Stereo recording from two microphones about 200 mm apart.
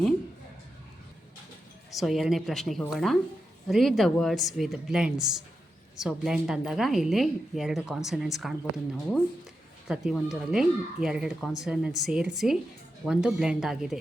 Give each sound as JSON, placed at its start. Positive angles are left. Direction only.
{"t": 1.9, "sound": "speech", "side_deg": 0}
{"t": 9.9, "sound": "speech", "side_deg": 0}